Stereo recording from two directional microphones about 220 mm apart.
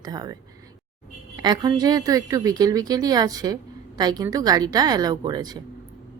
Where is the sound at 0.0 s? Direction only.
15° right (ahead or behind).